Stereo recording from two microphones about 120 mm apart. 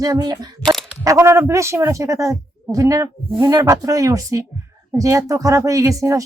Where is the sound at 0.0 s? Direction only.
35° right (ahead or behind).